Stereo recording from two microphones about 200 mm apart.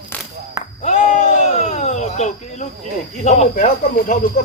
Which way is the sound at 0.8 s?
40° left (ahead or behind).